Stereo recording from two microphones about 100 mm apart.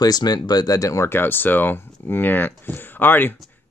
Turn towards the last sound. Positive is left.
turn(degrees=20)  # may be behind; listen again after turning